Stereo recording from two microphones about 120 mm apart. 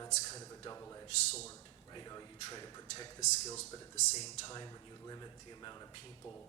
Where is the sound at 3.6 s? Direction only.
70° left (ahead or behind).